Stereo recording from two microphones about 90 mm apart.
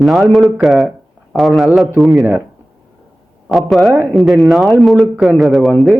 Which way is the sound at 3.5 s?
Centre (ahead or behind).